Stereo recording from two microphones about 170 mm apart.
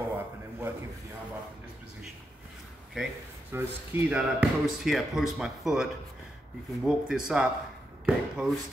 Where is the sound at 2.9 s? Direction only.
5° right (ahead or behind).